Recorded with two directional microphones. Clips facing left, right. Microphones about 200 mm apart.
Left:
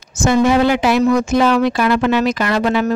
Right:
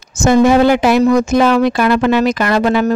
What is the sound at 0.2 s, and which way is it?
Speech, 45° right (ahead or behind).